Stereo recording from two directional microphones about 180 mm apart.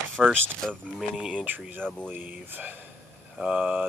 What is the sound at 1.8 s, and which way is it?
Speech, 5° left (ahead or behind).